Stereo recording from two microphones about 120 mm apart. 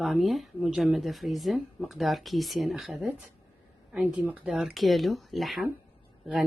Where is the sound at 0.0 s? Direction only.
Centre (ahead or behind).